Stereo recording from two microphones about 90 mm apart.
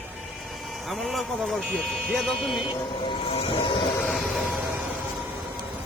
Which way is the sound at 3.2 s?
85° left.